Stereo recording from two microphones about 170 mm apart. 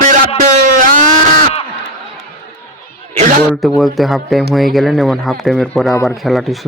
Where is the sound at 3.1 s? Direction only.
50° right (ahead or behind).